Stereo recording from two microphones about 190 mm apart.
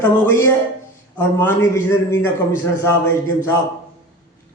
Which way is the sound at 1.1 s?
10° left (ahead or behind).